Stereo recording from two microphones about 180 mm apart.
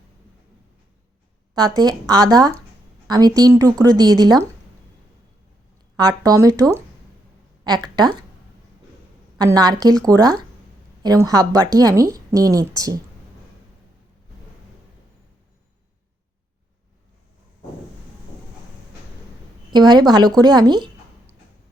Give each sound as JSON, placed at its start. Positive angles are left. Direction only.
{"t": 1.5, "sound": "a woman's voice", "side_deg": -20}
{"t": 6.0, "sound": "a woman's voice", "side_deg": -20}
{"t": 9.4, "sound": "a woman's voice", "side_deg": -20}
{"t": 19.7, "sound": "a woman's voice", "side_deg": -25}